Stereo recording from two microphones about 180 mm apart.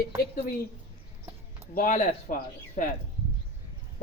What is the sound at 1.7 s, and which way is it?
Speech, 45° left (ahead or behind).